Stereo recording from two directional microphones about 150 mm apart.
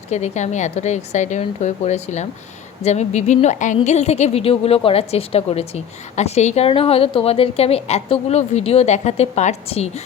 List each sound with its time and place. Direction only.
0.1 s a woman's voice: 50° left (ahead or behind)